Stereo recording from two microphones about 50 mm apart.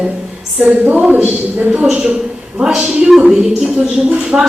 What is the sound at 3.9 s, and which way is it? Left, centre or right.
Speech, centre.